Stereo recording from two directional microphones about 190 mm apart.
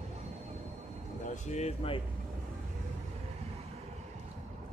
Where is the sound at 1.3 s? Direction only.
40° left (ahead or behind).